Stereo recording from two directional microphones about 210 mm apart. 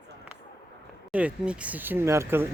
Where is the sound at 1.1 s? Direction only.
5° right (ahead or behind).